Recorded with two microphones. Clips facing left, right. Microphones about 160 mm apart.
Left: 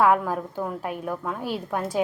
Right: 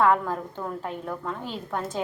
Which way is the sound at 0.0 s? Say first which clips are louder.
Left 2 dB; 10° left (ahead or behind).